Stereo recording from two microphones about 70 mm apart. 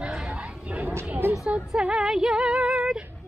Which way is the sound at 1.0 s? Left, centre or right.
Right.